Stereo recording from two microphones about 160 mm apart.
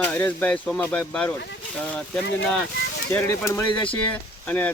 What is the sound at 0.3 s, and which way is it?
Speech, 10° left (ahead or behind).